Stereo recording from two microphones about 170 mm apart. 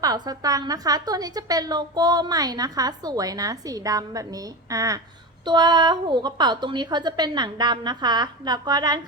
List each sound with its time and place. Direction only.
0.0 s a woman's voice: 20° right (ahead or behind)